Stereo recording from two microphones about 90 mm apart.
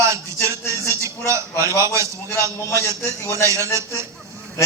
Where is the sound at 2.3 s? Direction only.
25° left (ahead or behind).